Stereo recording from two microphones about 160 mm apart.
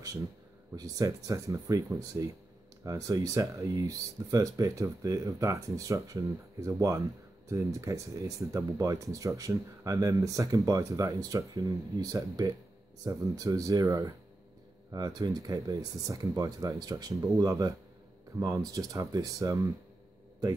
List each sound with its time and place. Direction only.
0.7 s speech: 20° right (ahead or behind)